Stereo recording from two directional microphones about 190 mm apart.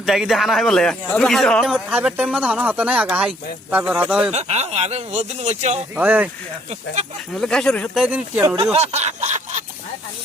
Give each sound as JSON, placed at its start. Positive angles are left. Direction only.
{"t": 0.0, "sound": "speech", "side_deg": 0}
{"t": 4.3, "sound": "speech", "side_deg": -35}
{"t": 6.0, "sound": "speech", "side_deg": -10}
{"t": 7.3, "sound": "speech", "side_deg": 5}
{"t": 8.0, "sound": "speech", "side_deg": -10}
{"t": 8.7, "sound": "snicker", "side_deg": -35}